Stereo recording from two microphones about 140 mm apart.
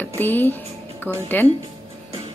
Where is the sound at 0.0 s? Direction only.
15° left (ahead or behind).